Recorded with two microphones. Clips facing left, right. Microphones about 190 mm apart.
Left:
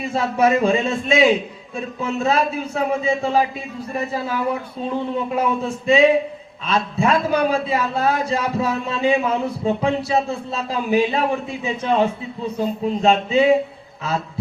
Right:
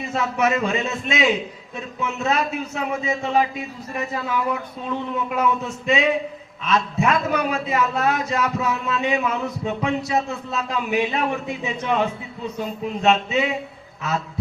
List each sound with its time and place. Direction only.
0.1 s a man's voice: 30° left (ahead or behind)
5.4 s a man's voice: 30° left (ahead or behind)